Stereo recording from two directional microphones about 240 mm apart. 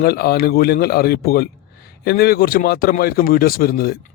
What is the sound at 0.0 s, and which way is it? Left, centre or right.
A man's voice, left.